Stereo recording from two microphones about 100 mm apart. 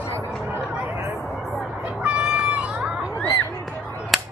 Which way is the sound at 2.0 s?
10° right (ahead or behind).